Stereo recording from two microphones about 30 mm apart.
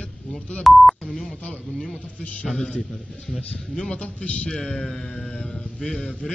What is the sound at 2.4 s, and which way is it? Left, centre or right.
Speech, centre.